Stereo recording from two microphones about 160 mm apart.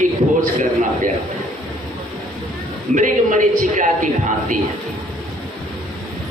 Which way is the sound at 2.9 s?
55° right (ahead or behind).